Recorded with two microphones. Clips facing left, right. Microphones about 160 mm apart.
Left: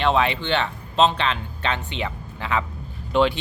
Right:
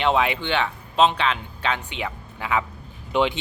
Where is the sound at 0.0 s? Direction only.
15° right (ahead or behind).